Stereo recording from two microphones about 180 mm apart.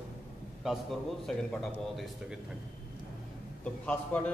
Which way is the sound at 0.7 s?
Centre (ahead or behind).